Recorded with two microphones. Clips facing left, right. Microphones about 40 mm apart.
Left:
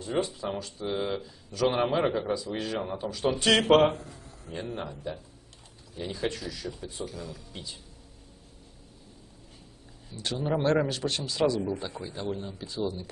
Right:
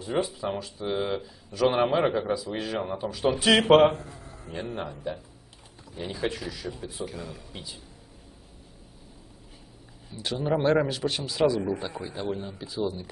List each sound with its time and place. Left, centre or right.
0.0 s speech: centre
4.0 s a sound: right
4.5 s speech: centre
7.1 s speech: right
7.5 s speech: centre
10.0 s speech: centre